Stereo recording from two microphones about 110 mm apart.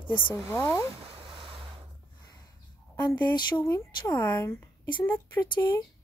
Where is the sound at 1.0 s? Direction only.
50° right (ahead or behind).